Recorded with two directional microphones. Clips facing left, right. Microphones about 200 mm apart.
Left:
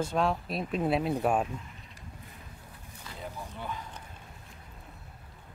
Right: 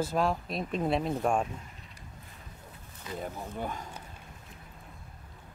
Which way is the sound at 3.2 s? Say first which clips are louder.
Right 3 dB; 45° right (ahead or behind).